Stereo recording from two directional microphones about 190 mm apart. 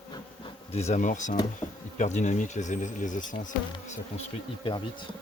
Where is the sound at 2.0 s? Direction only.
40° left (ahead or behind).